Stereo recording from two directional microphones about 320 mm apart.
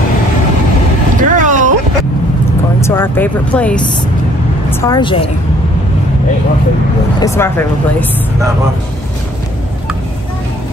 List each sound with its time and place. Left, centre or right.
1.3 s a sound: right
2.8 s speech: centre
7.2 s speech: centre